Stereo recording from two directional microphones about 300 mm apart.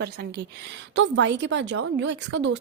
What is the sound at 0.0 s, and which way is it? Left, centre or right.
A woman's voice, right.